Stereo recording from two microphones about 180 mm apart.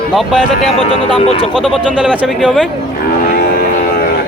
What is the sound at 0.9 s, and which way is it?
Speech, 30° left (ahead or behind).